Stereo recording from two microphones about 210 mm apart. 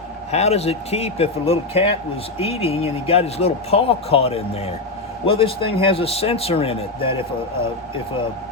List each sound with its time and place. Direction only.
0.3 s a man's voice: 30° left (ahead or behind)